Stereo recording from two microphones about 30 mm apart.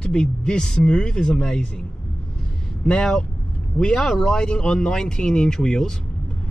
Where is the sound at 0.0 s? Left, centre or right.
Left.